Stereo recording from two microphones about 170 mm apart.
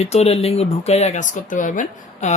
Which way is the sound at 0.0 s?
40° left (ahead or behind).